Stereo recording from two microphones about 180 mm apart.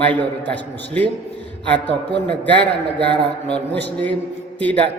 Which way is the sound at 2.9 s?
70° right (ahead or behind).